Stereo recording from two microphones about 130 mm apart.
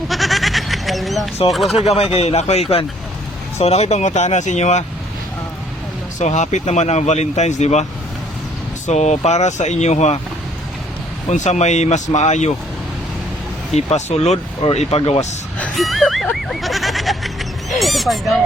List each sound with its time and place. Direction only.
0.1 s goat: centre (ahead or behind)
1.5 s speech: centre (ahead or behind)
1.8 s speech: 55° left (ahead or behind)
6.1 s speech: 65° left (ahead or behind)
8.9 s speech: 60° left (ahead or behind)
11.3 s speech: 65° left (ahead or behind)
13.7 s speech: 60° left (ahead or behind)
15.5 s music: 5° left (ahead or behind)